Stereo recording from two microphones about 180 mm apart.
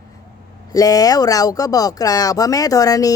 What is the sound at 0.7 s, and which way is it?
Speech, 20° left (ahead or behind).